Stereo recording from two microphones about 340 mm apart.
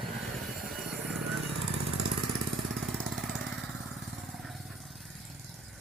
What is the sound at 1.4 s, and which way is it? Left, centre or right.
Jackhammer, right.